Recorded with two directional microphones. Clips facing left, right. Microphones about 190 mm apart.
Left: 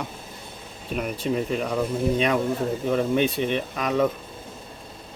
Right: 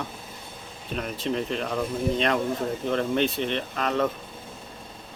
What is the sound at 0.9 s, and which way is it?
Speech, 10° left (ahead or behind).